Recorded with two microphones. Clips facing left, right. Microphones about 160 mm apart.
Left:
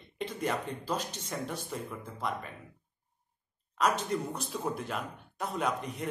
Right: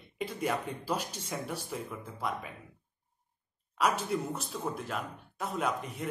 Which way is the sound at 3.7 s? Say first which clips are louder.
Even; 5° right (ahead or behind).